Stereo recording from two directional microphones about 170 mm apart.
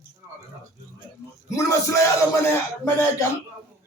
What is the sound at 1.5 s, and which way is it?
A man's voice, 20° left (ahead or behind).